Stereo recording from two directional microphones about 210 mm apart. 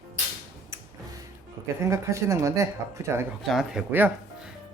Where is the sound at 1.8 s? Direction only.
15° right (ahead or behind).